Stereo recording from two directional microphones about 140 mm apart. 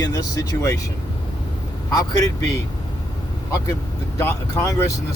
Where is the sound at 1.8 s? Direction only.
25° left (ahead or behind).